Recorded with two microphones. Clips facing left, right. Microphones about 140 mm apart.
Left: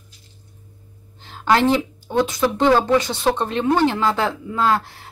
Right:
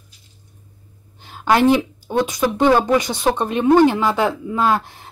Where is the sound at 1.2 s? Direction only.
15° right (ahead or behind).